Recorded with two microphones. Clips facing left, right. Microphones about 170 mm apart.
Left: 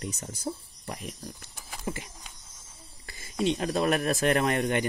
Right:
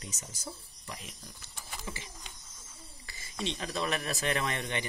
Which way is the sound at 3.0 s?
50° left (ahead or behind).